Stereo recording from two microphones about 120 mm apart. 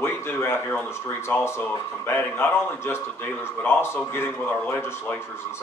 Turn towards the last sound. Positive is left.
turn(degrees=20)  # may be behind; listen again after turning